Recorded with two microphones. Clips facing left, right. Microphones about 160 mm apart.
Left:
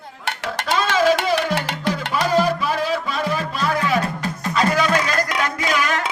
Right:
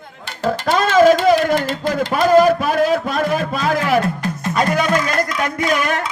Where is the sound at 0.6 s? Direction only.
50° right (ahead or behind).